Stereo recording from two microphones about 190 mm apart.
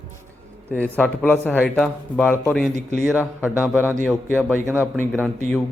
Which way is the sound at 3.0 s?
10° right (ahead or behind).